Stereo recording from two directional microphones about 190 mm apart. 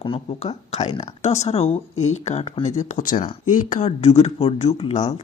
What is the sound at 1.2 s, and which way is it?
Speech, 35° left (ahead or behind).